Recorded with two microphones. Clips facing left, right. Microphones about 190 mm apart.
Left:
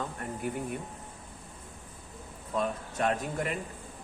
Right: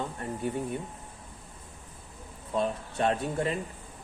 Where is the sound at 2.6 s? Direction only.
30° right (ahead or behind).